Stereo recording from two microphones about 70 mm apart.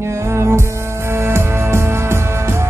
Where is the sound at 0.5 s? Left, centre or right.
Right.